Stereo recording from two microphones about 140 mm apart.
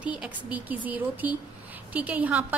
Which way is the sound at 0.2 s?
10° right (ahead or behind).